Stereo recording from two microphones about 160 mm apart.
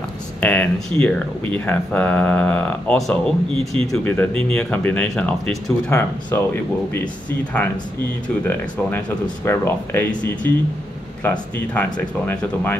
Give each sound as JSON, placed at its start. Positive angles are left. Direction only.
{"t": 0.4, "sound": "speech", "side_deg": 10}
{"t": 8.5, "sound": "speech", "side_deg": 15}